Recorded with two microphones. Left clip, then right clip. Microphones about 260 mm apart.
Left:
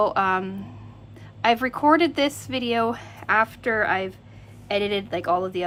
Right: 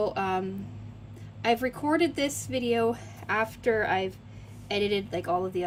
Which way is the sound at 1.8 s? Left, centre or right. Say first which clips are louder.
Left 11 dB; centre.